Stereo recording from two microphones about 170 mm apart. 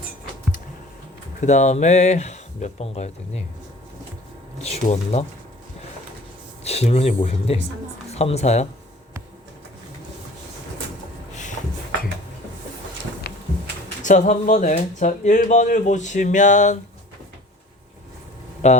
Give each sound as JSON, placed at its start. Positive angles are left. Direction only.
{"t": 1.4, "sound": "speech", "side_deg": 45}
{"t": 4.6, "sound": "speech", "side_deg": 40}
{"t": 6.7, "sound": "speech", "side_deg": 35}
{"t": 13.2, "sound": "a sound", "side_deg": 70}
{"t": 14.0, "sound": "speech", "side_deg": 45}
{"t": 18.6, "sound": "speech", "side_deg": 40}